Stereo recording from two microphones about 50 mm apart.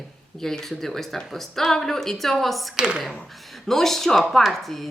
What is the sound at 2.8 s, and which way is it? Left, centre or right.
Speech, centre.